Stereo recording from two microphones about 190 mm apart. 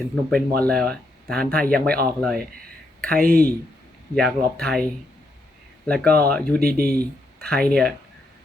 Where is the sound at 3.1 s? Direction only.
50° right (ahead or behind).